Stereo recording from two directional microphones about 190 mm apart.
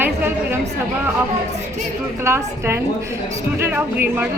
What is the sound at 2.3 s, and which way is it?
Speech, 15° right (ahead or behind).